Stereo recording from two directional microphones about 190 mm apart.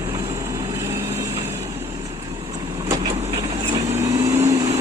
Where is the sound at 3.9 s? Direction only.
15° right (ahead or behind).